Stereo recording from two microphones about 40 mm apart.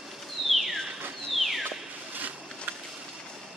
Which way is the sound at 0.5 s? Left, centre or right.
Centre.